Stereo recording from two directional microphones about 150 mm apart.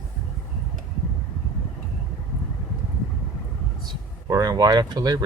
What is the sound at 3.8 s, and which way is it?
Speech, 25° right (ahead or behind).